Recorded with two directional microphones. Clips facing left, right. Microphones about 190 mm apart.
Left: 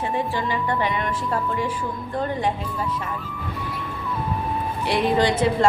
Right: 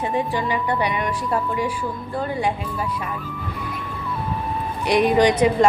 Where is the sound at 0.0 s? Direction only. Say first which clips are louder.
Right 2 dB; 15° right (ahead or behind).